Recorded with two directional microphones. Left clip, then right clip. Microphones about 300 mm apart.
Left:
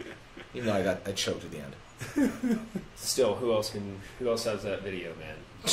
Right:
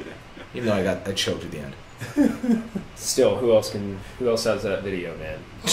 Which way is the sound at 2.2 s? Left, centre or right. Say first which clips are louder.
Right 7 dB; left.